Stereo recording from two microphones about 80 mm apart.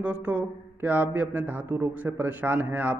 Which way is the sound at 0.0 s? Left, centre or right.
Centre.